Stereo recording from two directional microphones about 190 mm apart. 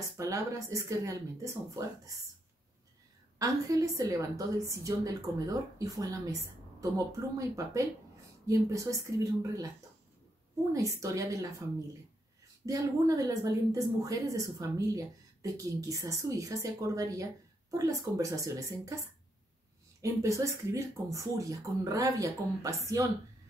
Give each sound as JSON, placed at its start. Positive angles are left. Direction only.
{"t": 0.2, "sound": "a woman's voice", "side_deg": -15}
{"t": 3.3, "sound": "a woman's voice", "side_deg": -15}
{"t": 10.7, "sound": "a woman's voice", "side_deg": -15}
{"t": 12.6, "sound": "a woman's voice", "side_deg": -15}
{"t": 20.0, "sound": "a woman's voice", "side_deg": -15}